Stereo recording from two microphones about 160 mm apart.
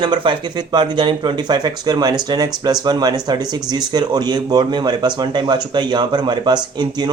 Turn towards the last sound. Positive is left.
turn(degrees=-25)  # may be behind; listen again after turning